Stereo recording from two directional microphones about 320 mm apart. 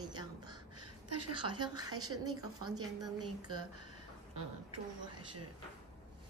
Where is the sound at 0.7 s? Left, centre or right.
Right.